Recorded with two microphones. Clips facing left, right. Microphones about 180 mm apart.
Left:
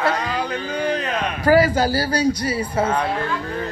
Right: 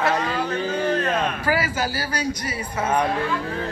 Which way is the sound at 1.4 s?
40° left (ahead or behind).